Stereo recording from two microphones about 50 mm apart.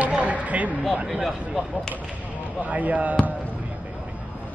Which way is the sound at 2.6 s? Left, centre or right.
Right.